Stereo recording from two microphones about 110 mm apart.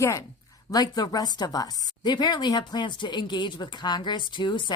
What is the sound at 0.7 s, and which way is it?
Speech, 35° left (ahead or behind).